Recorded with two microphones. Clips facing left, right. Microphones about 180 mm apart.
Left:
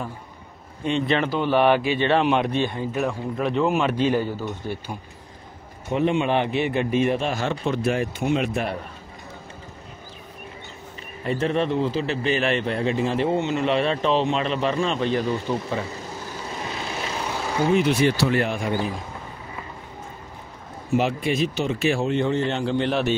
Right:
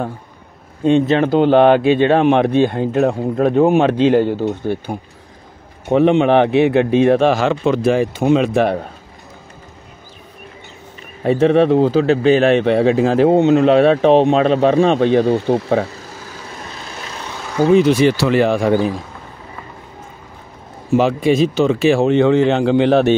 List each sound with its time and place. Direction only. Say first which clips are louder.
1.0 s speech: right 7 dB; 45° right (ahead or behind)
1.4 s a man's voice: right 9 dB; 60° right (ahead or behind)
2.0 s a man's voice: right 7 dB; 50° right (ahead or behind)
3.1 s speech: right 9 dB; 45° right (ahead or behind)
4.0 s speech: right 9 dB; 65° right (ahead or behind)
4.5 s a man's voice: right 10 dB; 55° right (ahead or behind)
5.9 s speech: right 9 dB; 70° right (ahead or behind); by 8.7 s 90° right
11.2 s a man's voice: right 11 dB; 65° right (ahead or behind)
11.9 s speech: right 11 dB; 90° right
13.6 s a man's voice: right 11 dB; 65° right (ahead or behind)
17.6 s speech: right 9 dB; 35° right (ahead or behind)
17.9 s speech: right 7 dB; 90° right
20.9 s speech: right 8 dB; 90° right